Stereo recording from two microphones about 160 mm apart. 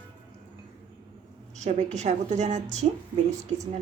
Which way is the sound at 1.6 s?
45° right (ahead or behind).